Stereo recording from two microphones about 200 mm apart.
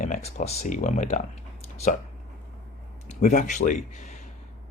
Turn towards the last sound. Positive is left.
turn(degrees=40)  # may be behind; listen again after turning